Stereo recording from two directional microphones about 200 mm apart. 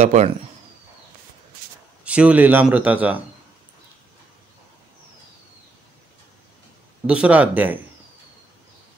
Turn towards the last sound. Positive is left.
turn(degrees=-10)  # may be behind; listen again after turning